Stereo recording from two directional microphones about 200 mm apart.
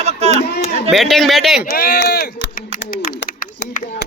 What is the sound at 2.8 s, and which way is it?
Bird, 50° left (ahead or behind).